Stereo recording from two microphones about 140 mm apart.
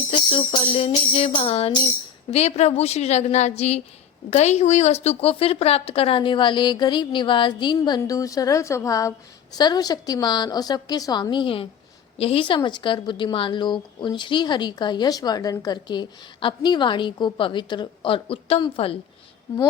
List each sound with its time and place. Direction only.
0.1 s music: 35° left (ahead or behind)
4.3 s a woman's voice: 50° left (ahead or behind)
18.6 s music: 40° left (ahead or behind)